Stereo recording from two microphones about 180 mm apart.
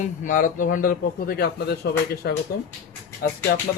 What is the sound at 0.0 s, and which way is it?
A man's voice, 45° left (ahead or behind).